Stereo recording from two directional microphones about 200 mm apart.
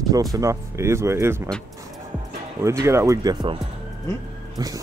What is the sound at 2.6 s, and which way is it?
Speech, 15° right (ahead or behind).